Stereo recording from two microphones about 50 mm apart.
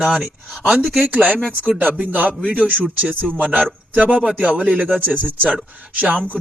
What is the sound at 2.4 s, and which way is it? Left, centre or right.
Speech, centre.